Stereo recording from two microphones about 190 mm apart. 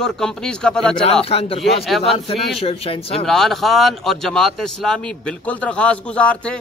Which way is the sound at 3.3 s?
Centre (ahead or behind).